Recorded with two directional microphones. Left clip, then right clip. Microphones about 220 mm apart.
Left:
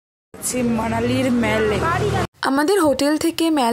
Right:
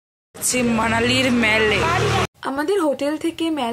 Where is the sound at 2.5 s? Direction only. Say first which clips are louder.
Left 5 dB; 45° left (ahead or behind).